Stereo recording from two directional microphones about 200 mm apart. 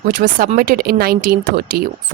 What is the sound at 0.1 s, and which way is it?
Speech, 40° right (ahead or behind).